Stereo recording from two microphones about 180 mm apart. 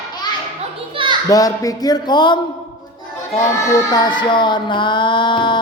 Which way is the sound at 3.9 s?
25° left (ahead or behind).